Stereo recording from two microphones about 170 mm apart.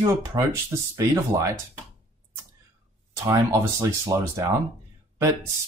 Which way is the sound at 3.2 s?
20° right (ahead or behind).